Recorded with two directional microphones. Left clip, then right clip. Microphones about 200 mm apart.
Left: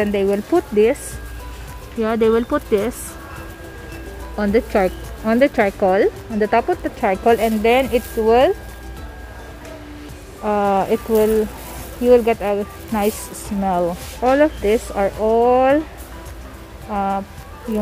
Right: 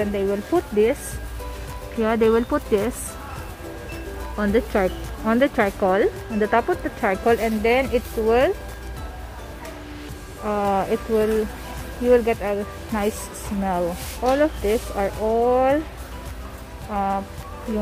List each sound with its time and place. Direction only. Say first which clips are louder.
0.0 s speech: left 5 dB; 30° left (ahead or behind)
2.0 s speech: left 2 dB; 10° left (ahead or behind)
4.4 s speech: left 4 dB; 15° left (ahead or behind)
10.4 s speech: left 5 dB; 20° left (ahead or behind)
16.9 s speech: left 3 dB; 15° left (ahead or behind)